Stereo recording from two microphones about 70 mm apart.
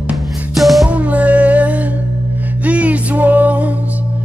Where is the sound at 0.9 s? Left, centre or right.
Centre.